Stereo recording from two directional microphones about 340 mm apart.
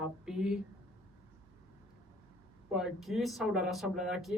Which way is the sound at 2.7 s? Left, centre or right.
Centre.